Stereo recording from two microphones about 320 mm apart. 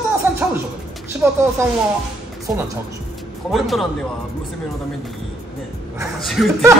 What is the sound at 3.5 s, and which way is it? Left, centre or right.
Speech, centre.